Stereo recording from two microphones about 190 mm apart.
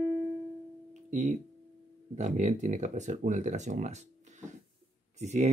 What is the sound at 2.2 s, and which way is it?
Speech, 40° right (ahead or behind).